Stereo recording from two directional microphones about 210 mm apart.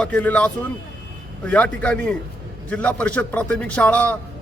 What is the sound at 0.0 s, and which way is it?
A man's voice, 5° left (ahead or behind).